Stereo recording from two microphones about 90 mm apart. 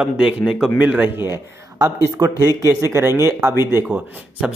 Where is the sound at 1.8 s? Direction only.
45° right (ahead or behind); by 3.8 s 30° right (ahead or behind).